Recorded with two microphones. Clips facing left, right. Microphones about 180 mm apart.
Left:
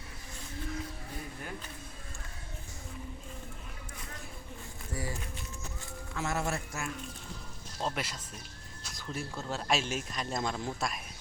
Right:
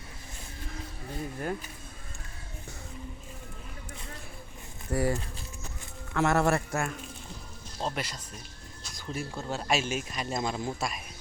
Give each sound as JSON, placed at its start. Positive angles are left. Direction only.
{"t": 4.9, "sound": "a man's voice", "side_deg": -65}
{"t": 6.1, "sound": "a man's voice", "side_deg": -65}
{"t": 7.8, "sound": "speech", "side_deg": 0}
{"t": 8.8, "sound": "a sound", "side_deg": 0}
{"t": 9.5, "sound": "speech", "side_deg": 0}